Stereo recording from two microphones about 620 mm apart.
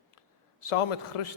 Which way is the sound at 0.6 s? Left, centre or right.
Left.